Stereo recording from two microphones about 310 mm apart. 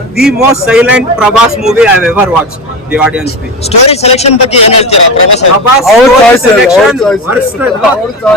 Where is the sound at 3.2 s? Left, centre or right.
Centre.